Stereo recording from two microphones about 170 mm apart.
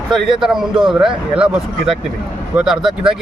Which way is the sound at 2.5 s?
5° right (ahead or behind).